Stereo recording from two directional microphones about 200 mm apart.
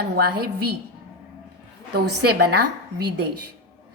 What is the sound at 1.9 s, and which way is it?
Speech, 55° right (ahead or behind).